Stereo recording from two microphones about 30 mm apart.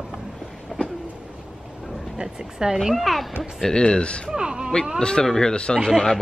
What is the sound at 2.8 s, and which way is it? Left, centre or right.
Speech, centre.